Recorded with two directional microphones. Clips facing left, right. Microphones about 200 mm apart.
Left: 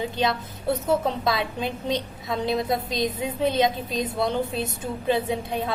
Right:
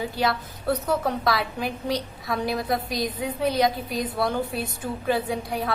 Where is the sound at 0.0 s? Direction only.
20° left (ahead or behind).